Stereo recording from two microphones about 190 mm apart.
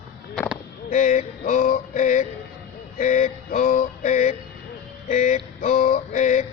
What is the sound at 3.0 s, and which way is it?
Music, 40° left (ahead or behind).